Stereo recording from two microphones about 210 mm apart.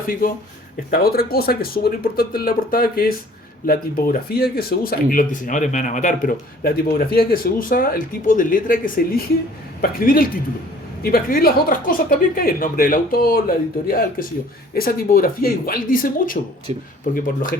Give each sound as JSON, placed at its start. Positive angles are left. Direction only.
{"t": 0.9, "sound": "a woman's voice", "side_deg": 45}
{"t": 16.7, "sound": "speech", "side_deg": -30}
{"t": 17.1, "sound": "speech", "side_deg": 40}